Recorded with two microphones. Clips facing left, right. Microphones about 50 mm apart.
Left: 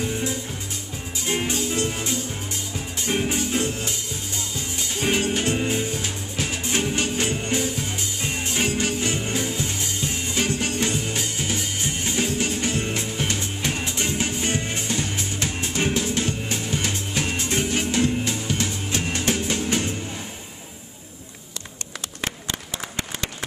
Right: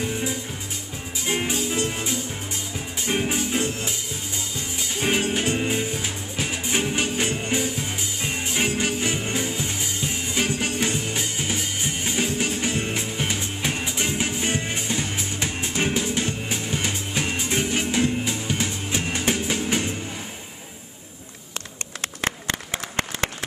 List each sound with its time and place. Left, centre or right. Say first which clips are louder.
0.0 s music: left 1 dB; centre
5.0 s music: even; centre
22.2 s applause: right 3 dB; right